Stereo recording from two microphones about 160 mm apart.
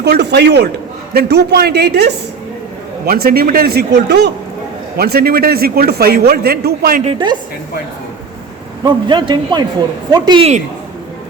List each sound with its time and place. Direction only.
0.0 s a man's voice: 90° right
3.1 s a man's voice: 70° right (ahead or behind); by 4.3 s 90° right
4.9 s a man's voice: 75° right (ahead or behind)
7.0 s a woman's voice: 30° right (ahead or behind)
8.8 s a man's voice: 30° right (ahead or behind)